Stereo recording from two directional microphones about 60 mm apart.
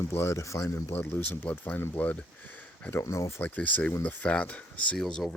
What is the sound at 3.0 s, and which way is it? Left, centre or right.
Speech, left.